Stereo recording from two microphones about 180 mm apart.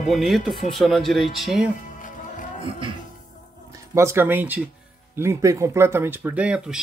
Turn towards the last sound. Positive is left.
turn(degrees=-5)  # may be behind; listen again after turning